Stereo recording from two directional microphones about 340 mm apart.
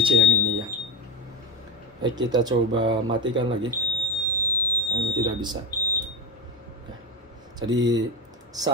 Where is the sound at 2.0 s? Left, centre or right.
Centre.